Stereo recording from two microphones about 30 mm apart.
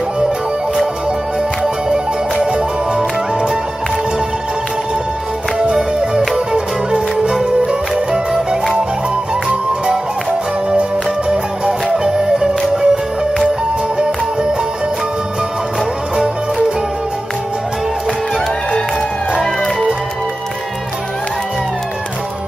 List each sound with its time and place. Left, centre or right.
5.9 s music: right
7.9 s music: centre
10.8 s music: right
12.7 s music: right